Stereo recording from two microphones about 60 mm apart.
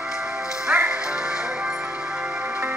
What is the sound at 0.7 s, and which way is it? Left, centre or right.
Music, centre.